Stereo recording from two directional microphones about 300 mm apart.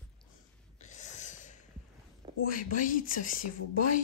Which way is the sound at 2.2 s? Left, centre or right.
Centre.